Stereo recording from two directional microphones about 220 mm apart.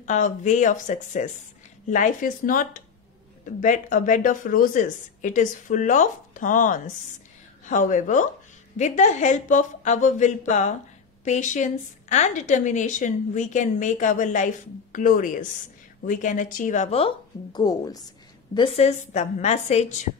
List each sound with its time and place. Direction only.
0.0 s a woman's voice: 35° left (ahead or behind)